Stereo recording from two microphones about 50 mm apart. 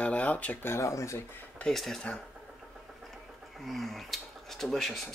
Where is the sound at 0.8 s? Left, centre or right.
Left.